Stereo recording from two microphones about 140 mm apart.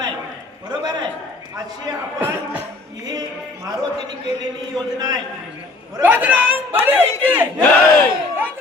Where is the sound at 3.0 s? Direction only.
25° right (ahead or behind).